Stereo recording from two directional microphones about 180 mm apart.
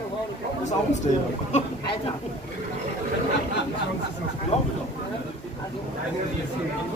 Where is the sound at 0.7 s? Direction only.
40° left (ahead or behind).